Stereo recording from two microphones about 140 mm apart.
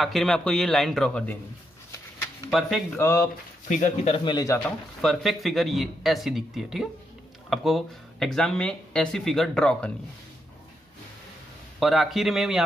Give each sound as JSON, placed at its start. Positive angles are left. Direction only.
{"t": 0.0, "sound": "speech", "side_deg": 0}
{"t": 3.0, "sound": "speech", "side_deg": 20}
{"t": 3.6, "sound": "speech", "side_deg": 60}
{"t": 4.1, "sound": "speech", "side_deg": 35}
{"t": 4.6, "sound": "speech", "side_deg": 0}
{"t": 11.8, "sound": "speech", "side_deg": 0}